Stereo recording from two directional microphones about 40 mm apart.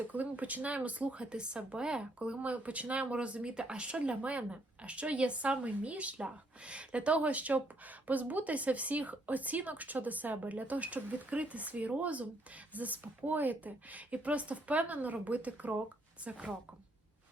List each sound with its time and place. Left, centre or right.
0.1 s speech: right
16.3 s a woman's voice: right